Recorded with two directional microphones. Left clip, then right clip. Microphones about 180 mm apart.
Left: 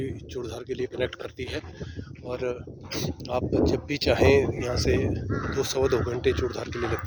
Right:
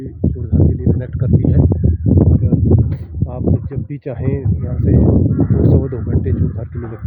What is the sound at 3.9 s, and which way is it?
Speech, 40° left (ahead or behind).